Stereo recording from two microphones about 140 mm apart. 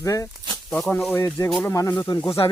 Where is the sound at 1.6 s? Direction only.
20° left (ahead or behind).